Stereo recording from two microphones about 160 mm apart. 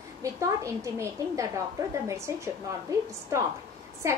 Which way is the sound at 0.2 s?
20° right (ahead or behind).